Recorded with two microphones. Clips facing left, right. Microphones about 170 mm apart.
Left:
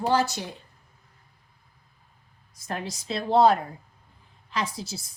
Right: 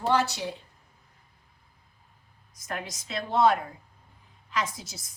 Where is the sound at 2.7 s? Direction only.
30° left (ahead or behind).